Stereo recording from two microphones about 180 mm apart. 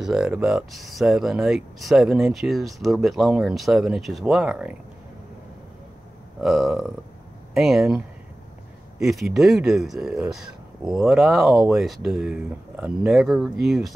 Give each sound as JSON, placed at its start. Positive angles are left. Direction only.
{"t": 0.0, "sound": "speech", "side_deg": -5}
{"t": 6.4, "sound": "speech", "side_deg": 0}
{"t": 9.0, "sound": "speech", "side_deg": 0}